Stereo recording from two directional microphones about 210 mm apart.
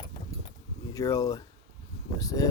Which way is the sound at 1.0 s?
15° left (ahead or behind).